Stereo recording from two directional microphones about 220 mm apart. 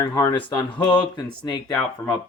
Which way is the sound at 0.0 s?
10° left (ahead or behind).